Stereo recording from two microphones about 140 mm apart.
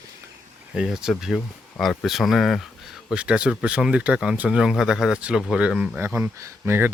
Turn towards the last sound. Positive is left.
turn(degrees=-15)  # may be behind; listen again after turning